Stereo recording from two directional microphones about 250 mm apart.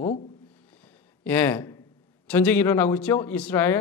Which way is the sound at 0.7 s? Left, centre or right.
Centre.